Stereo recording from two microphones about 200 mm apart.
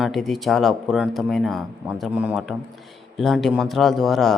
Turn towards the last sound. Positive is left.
turn(degrees=0)  # may be behind; listen again after turning